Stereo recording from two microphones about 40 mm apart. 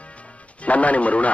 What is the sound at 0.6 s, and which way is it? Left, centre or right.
Speech, left.